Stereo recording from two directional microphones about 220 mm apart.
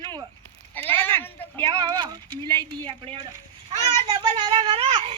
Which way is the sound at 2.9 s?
25° right (ahead or behind).